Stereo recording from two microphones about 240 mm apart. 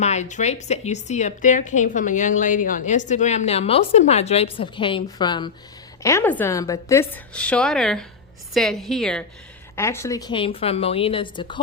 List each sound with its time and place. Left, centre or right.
0.0 s a woman's voice: left